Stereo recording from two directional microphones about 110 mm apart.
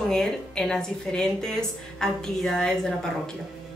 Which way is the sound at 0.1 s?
5° left (ahead or behind).